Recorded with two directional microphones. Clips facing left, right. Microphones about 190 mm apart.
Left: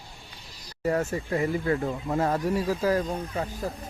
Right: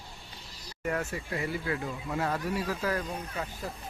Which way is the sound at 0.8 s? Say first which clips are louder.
Left 6 dB; 35° left (ahead or behind).